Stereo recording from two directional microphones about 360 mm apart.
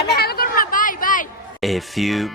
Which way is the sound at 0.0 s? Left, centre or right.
Left.